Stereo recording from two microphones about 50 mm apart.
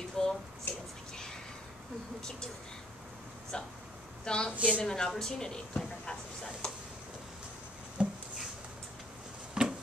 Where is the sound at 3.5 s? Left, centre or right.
Centre.